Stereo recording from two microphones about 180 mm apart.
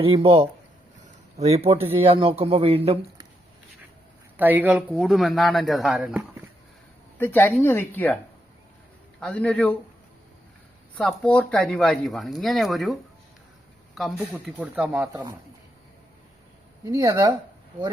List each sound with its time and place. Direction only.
0.0 s speech: 30° right (ahead or behind)
1.8 s speech: 10° right (ahead or behind)
2.0 s speech: 30° right (ahead or behind)
4.4 s speech: 10° right (ahead or behind)
7.2 s a woman's voice: 10° left (ahead or behind)
9.2 s a woman's voice: 5° left (ahead or behind)
10.9 s speech: 5° left (ahead or behind); by 15.2 s 10° right (ahead or behind)
16.8 s speech: 20° right (ahead or behind)